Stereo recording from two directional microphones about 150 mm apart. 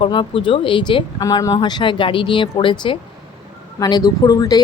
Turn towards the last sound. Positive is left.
turn(degrees=25)  # may be behind; listen again after turning